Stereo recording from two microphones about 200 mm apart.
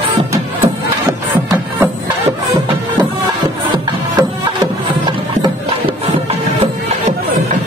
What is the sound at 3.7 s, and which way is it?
Music, 20° right (ahead or behind).